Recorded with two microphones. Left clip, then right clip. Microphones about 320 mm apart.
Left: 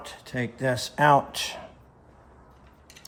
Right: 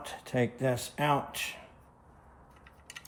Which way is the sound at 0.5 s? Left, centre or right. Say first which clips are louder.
Left 5 dB; centre.